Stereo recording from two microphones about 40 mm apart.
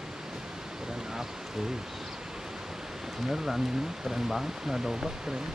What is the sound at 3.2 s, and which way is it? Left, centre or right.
Speech, centre.